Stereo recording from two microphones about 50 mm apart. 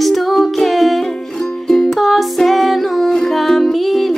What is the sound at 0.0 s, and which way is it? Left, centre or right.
Music, centre.